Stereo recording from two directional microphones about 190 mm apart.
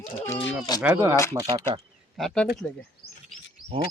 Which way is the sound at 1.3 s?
25° right (ahead or behind).